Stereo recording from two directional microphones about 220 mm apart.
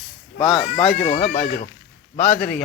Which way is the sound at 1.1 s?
30° left (ahead or behind).